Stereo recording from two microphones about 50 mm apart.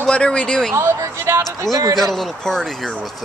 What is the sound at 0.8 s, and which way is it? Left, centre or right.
Speech, right.